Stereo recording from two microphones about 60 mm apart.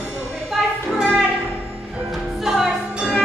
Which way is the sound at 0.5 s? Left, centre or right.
Centre.